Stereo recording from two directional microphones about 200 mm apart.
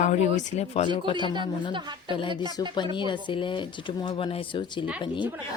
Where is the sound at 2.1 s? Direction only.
25° left (ahead or behind).